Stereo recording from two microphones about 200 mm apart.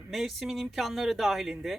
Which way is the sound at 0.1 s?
Centre (ahead or behind).